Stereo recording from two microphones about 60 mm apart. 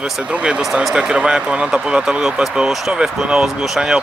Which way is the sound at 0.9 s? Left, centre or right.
Centre.